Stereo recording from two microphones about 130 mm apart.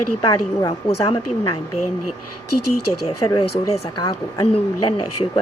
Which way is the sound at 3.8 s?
30° left (ahead or behind).